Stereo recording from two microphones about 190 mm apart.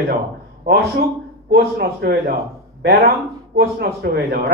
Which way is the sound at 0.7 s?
60° right (ahead or behind).